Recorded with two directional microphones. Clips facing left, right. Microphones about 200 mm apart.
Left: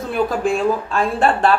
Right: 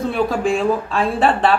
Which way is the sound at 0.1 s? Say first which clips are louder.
Left 3 dB; centre (ahead or behind).